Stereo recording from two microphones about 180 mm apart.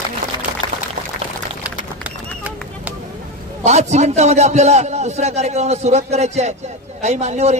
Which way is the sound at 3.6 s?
40° right (ahead or behind).